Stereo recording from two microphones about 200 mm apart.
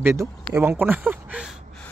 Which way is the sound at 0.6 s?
10° right (ahead or behind).